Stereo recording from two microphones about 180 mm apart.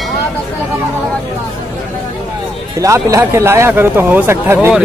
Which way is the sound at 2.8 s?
15° right (ahead or behind).